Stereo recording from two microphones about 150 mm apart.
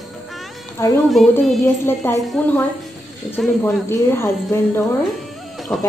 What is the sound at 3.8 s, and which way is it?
Speech, 15° left (ahead or behind).